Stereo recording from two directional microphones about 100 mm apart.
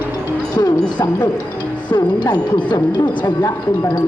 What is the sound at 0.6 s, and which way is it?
Speech, 30° left (ahead or behind).